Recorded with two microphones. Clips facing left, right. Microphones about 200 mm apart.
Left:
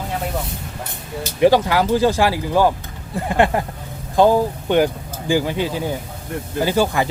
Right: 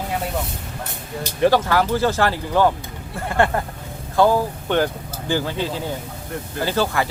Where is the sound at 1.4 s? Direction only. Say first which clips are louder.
Left 3 dB; 15° left (ahead or behind).